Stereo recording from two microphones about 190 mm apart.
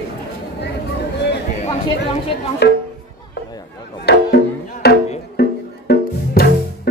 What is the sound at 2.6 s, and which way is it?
Speech, 60° left (ahead or behind).